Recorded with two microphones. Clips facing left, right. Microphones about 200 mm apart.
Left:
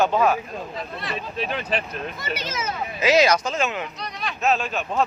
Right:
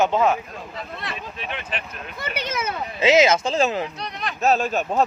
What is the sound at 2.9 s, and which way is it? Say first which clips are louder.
A man's voice: right 2 dB; 25° right (ahead or behind).